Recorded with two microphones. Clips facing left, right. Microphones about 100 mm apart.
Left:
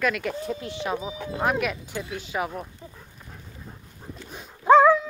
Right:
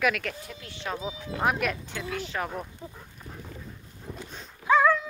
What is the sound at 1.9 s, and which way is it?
Speech, 20° left (ahead or behind).